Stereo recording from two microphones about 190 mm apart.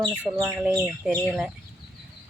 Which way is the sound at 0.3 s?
10° right (ahead or behind).